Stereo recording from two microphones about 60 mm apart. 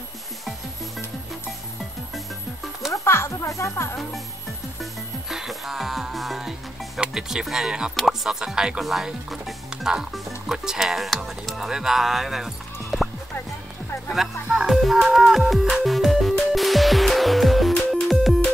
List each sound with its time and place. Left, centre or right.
2.1 s music: centre
3.1 s speech: left
5.3 s music: centre
7.0 s speech: centre
12.9 s music: centre